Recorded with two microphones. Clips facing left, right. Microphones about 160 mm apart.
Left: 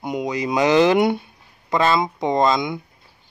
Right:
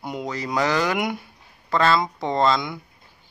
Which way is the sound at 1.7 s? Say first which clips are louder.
Left 1 dB; 15° left (ahead or behind).